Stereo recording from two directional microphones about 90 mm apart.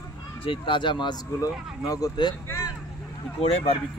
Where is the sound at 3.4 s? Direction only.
90° left.